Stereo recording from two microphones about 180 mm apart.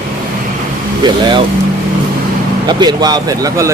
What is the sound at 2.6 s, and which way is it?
Speech, 25° right (ahead or behind).